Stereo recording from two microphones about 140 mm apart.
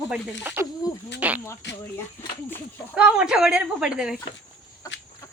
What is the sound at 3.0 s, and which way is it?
Speech, 5° right (ahead or behind).